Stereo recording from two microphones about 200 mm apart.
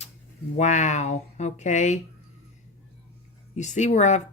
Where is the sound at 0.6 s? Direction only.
35° left (ahead or behind).